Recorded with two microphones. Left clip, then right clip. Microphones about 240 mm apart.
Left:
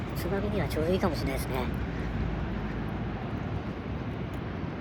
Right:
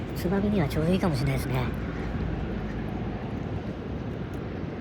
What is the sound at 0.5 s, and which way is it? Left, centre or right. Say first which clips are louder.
Speech: right 2 dB; centre.